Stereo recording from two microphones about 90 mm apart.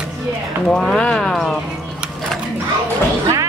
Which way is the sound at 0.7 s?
5° left (ahead or behind).